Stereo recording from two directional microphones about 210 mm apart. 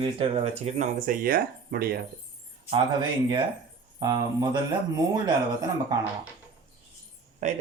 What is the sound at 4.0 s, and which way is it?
Speech, 20° right (ahead or behind).